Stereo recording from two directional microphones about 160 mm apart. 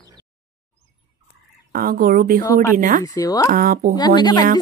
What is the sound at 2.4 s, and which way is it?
Speech, 20° left (ahead or behind).